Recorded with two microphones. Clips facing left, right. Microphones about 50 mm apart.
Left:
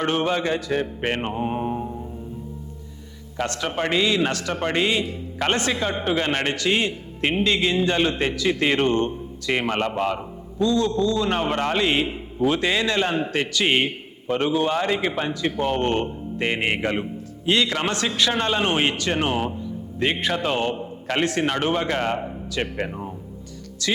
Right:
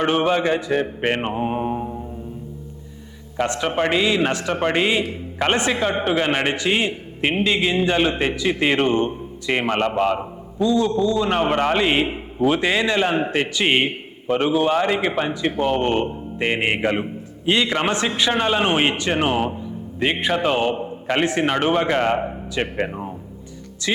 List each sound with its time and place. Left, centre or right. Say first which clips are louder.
0.0 s a man's voice: right 4 dB; right
3.3 s a man's voice: right 4 dB; centre
6.1 s a man's voice: right 1 dB; centre